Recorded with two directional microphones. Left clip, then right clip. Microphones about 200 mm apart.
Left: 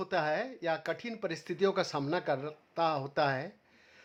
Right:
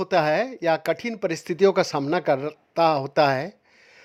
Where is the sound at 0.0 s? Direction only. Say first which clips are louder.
Right 11 dB; 45° right (ahead or behind).